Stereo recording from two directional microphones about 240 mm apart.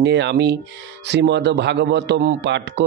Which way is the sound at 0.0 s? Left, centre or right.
Right.